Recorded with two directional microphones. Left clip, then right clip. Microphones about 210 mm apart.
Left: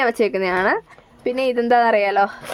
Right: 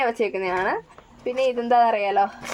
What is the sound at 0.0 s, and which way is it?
Speech, 40° left (ahead or behind).